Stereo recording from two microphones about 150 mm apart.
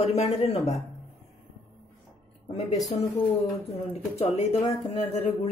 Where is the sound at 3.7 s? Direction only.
45° left (ahead or behind).